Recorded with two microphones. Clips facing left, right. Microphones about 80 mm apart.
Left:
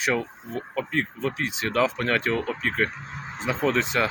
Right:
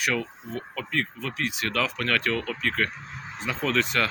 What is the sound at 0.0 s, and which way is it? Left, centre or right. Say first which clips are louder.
Speech: left 2 dB; left.